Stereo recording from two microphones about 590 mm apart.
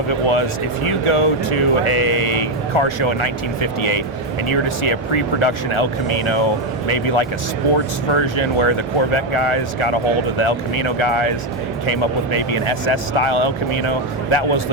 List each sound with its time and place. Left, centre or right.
0.1 s speech: left